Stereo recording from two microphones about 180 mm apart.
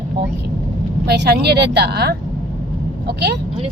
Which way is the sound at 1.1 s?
65° right (ahead or behind).